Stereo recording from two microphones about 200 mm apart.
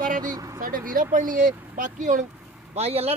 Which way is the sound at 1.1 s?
40° right (ahead or behind).